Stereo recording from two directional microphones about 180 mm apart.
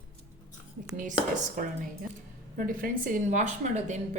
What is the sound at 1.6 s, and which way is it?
Speech, 45° right (ahead or behind).